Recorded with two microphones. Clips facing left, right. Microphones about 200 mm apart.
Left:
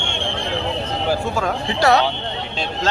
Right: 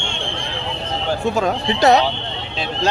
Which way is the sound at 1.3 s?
20° right (ahead or behind).